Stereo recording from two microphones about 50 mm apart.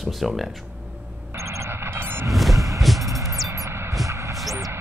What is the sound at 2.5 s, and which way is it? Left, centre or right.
Vehicle, right.